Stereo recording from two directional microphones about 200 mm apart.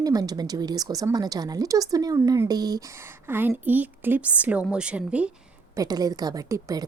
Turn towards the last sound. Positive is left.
turn(degrees=-15)  # may be behind; listen again after turning